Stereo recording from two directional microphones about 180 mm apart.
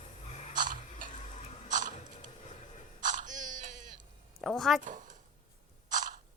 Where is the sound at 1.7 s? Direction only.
45° right (ahead or behind).